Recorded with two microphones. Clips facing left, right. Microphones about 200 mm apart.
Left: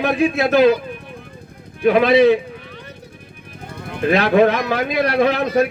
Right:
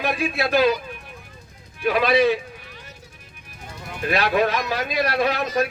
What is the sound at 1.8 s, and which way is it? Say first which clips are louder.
Speech: left 7 dB; 55° left (ahead or behind).